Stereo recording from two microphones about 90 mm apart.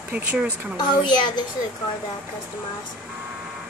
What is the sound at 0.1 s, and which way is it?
Speech, 15° right (ahead or behind).